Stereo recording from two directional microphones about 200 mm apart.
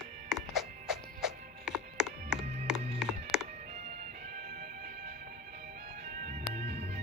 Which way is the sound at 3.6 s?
35° right (ahead or behind).